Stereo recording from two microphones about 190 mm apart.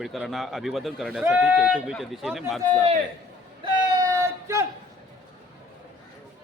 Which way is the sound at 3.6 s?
20° right (ahead or behind).